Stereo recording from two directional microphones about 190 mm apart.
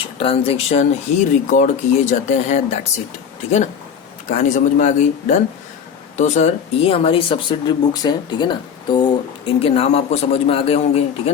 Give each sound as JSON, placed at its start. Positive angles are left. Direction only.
{"t": 0.2, "sound": "speech", "side_deg": 30}
{"t": 4.3, "sound": "speech", "side_deg": 40}